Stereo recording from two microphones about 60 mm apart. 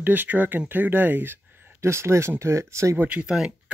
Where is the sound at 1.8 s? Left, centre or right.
Right.